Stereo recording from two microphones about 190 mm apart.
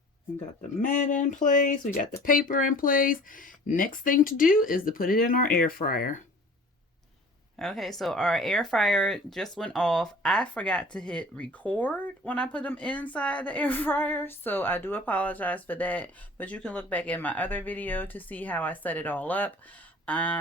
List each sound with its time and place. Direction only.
0.8 s speech: 40° left (ahead or behind)
7.6 s speech: centre (ahead or behind)